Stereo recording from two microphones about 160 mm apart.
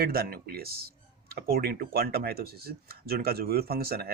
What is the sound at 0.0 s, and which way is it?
Speech, 70° right (ahead or behind).